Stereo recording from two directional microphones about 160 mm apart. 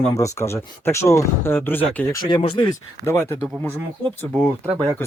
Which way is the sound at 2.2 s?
30° left (ahead or behind).